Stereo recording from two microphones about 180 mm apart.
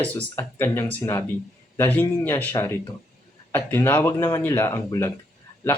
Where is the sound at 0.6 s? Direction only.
15° left (ahead or behind).